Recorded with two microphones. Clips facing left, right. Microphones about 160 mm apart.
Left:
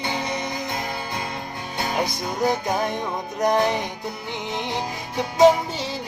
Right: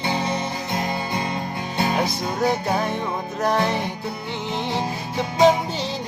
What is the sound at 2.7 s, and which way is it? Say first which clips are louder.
Music: right 1 dB; 15° left (ahead or behind).